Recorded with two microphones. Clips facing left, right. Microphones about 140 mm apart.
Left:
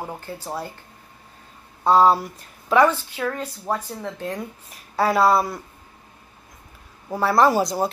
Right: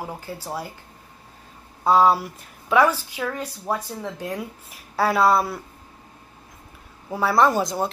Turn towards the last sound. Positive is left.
turn(degrees=0)  # may be behind; listen again after turning